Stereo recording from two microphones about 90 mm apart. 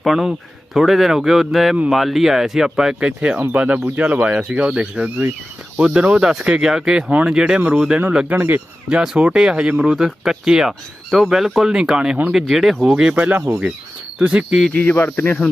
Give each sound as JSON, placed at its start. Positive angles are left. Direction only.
{"t": 0.0, "sound": "a man's voice", "side_deg": -5}
{"t": 8.4, "sound": "speech", "side_deg": -20}
{"t": 8.9, "sound": "speech", "side_deg": -10}
{"t": 14.8, "sound": "speech", "side_deg": 20}